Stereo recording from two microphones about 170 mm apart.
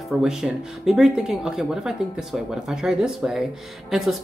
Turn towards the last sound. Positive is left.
turn(degrees=0)  # may be behind; listen again after turning